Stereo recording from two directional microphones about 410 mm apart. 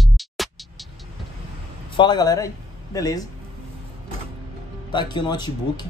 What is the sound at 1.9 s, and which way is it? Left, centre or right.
Speech, centre.